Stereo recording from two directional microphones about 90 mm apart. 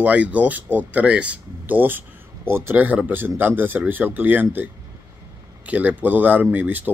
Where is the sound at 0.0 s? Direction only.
15° right (ahead or behind).